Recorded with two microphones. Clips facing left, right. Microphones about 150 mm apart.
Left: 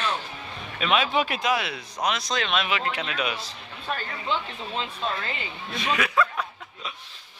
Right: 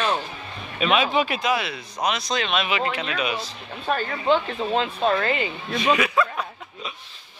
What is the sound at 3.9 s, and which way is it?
Speech, 50° right (ahead or behind).